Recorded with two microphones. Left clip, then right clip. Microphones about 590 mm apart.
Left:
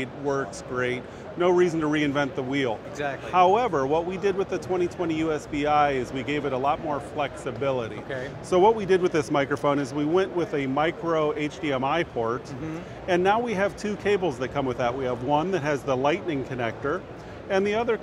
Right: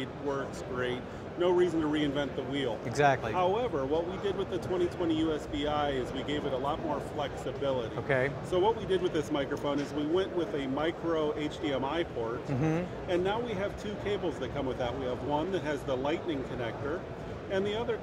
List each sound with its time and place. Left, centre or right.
0.0 s speech: left
3.0 s speech: right
3.3 s speech: left
13.1 s speech: left